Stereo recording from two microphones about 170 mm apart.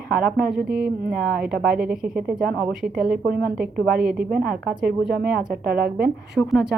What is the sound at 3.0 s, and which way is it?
A woman's voice, 60° right (ahead or behind).